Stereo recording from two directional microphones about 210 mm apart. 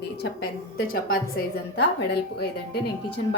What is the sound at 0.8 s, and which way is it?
A woman's voice, 45° left (ahead or behind).